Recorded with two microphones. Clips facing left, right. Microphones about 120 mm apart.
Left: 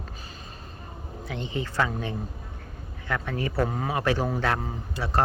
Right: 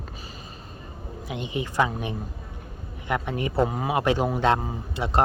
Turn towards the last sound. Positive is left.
turn(degrees=-20)  # may be behind; listen again after turning